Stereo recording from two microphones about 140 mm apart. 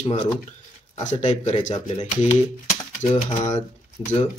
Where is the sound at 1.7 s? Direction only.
40° left (ahead or behind).